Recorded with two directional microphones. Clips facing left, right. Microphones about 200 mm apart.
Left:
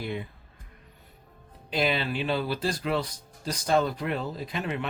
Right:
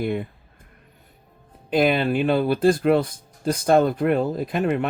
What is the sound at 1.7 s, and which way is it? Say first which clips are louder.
Speech: right 8 dB; 50° right (ahead or behind).